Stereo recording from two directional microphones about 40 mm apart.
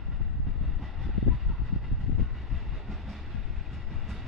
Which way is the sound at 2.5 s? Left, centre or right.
Centre.